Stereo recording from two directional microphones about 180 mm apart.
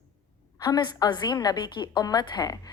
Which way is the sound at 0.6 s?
20° left (ahead or behind).